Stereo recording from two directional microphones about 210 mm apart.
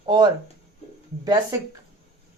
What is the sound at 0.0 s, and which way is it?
Speech, 20° right (ahead or behind).